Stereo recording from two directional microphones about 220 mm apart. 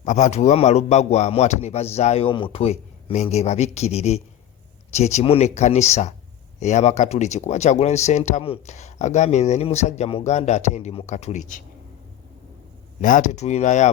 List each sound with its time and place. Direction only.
0.0 s speech: 35° left (ahead or behind)
13.0 s speech: 35° left (ahead or behind)